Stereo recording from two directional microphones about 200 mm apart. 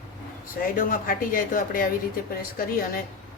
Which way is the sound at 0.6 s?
45° left (ahead or behind).